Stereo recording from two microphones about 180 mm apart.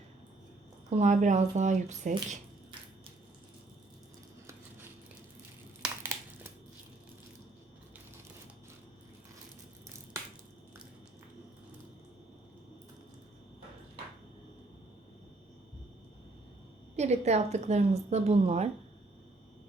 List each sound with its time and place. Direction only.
0.9 s a woman's voice: 40° right (ahead or behind)
5.8 s a sound: 10° right (ahead or behind)
17.0 s a woman's voice: 40° right (ahead or behind)